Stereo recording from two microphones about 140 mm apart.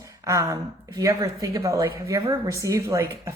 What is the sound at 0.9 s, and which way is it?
Speech, 25° right (ahead or behind).